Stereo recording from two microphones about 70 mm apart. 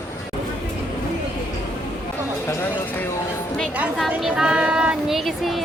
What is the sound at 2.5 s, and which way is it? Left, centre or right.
Speech, left.